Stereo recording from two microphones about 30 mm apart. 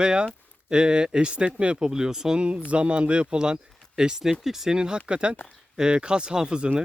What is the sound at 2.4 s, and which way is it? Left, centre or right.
Speech, right.